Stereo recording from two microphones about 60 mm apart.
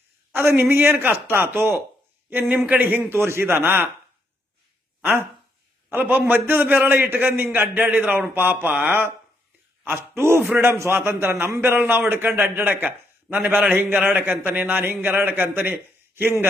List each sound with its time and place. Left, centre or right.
0.3 s a man's voice: right
3.2 s a man's voice: right
5.9 s a man's voice: right
7.8 s a man's voice: right